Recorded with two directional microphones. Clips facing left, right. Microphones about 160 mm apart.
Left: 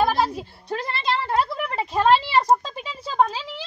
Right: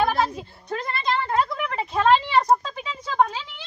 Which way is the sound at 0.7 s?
30° left (ahead or behind).